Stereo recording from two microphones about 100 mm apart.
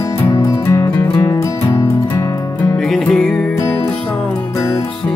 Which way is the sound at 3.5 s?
25° left (ahead or behind).